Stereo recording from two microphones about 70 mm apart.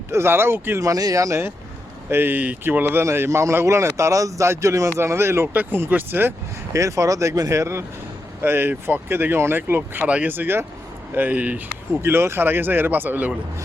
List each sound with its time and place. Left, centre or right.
0.1 s a man's voice: right
0.8 s a man's voice: right
6.7 s speech: right
8.4 s a man's voice: right
12.0 s a man's voice: right